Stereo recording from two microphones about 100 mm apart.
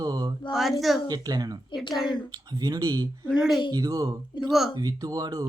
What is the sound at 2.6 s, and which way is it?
Speech, 40° right (ahead or behind).